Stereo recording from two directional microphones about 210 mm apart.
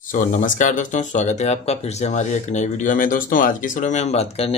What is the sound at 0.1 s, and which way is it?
Speech, 40° left (ahead or behind).